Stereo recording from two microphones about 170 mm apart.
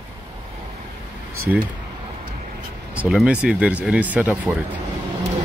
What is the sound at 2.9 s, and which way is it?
Speech, 5° right (ahead or behind).